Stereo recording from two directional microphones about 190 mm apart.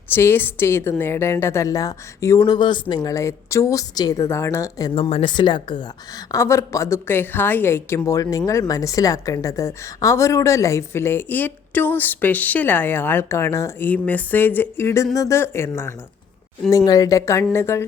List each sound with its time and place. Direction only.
0.1 s a woman's voice: 10° left (ahead or behind)
4.9 s a woman's voice: 30° left (ahead or behind); by 17.8 s 15° left (ahead or behind)